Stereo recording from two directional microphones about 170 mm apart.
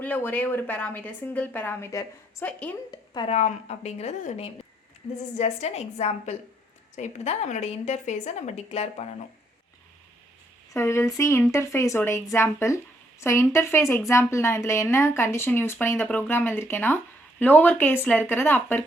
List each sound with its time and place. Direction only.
0.0 s a woman's voice: 10° left (ahead or behind)
3.2 s speech: 40° left (ahead or behind)
10.7 s a woman's voice: 15° left (ahead or behind)